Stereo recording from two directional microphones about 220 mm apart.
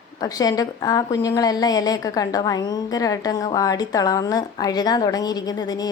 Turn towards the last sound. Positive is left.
turn(degrees=20)  # may be behind; listen again after turning